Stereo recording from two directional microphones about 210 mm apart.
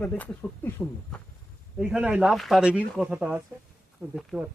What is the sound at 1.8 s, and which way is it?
Speech, 5° right (ahead or behind).